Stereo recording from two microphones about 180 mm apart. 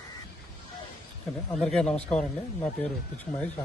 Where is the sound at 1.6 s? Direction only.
5° left (ahead or behind).